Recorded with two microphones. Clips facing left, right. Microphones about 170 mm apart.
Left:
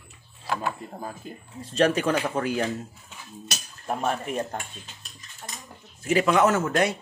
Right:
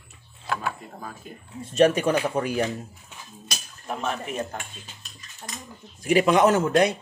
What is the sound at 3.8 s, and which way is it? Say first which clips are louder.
Speech: left 2 dB; 45° left (ahead or behind).